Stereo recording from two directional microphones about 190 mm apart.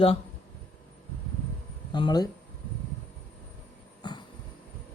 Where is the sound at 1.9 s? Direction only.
25° left (ahead or behind).